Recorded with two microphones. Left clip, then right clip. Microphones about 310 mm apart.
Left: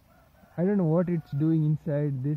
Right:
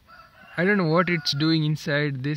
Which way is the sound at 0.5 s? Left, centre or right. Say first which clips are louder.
Right 5 dB; centre.